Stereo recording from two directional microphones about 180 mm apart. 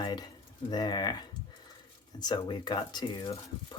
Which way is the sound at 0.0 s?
25° left (ahead or behind).